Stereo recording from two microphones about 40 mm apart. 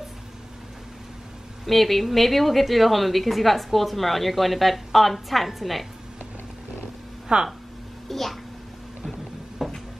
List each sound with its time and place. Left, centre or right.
1.7 s a woman's voice: centre
7.3 s speech: right
8.1 s a woman's voice: centre
9.6 s a sound: centre